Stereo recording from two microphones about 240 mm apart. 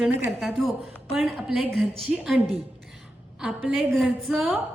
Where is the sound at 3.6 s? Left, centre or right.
Centre.